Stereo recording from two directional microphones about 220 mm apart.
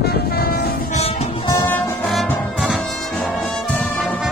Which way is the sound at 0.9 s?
30° left (ahead or behind).